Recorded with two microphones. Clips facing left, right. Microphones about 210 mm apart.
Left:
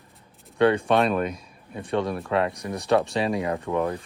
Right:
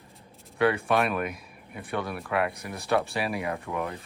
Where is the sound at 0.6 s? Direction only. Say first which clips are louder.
Left 4 dB; 30° left (ahead or behind).